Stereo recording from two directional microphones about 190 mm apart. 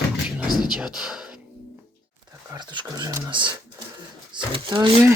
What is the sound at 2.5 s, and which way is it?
Speech, 25° right (ahead or behind).